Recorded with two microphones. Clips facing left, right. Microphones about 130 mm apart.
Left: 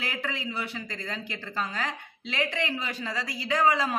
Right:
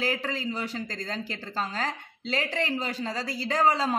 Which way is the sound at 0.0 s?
35° right (ahead or behind).